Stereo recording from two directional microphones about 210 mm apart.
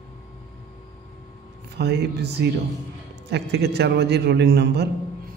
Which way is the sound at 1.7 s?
50° right (ahead or behind).